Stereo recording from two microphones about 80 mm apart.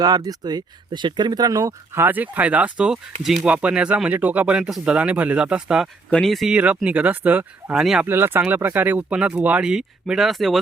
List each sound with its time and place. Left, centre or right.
0.0 s speech: right
2.0 s speech: right
6.1 s speech: centre
6.3 s speech: centre
6.8 s speech: centre
7.7 s speech: centre
8.0 s speech: right
9.6 s speech: centre